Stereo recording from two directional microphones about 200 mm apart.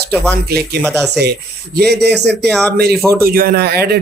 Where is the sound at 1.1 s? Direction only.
55° right (ahead or behind).